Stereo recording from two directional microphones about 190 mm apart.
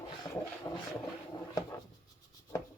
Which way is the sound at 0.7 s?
20° left (ahead or behind).